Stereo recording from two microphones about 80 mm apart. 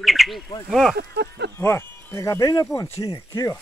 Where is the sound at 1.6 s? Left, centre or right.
Left.